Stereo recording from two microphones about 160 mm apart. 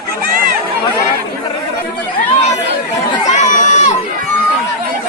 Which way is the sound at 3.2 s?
50° left (ahead or behind).